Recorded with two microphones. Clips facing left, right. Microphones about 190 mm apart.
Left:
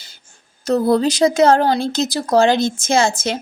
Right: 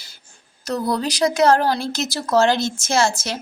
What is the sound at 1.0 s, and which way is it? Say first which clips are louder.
Speech: left 4 dB; 25° left (ahead or behind).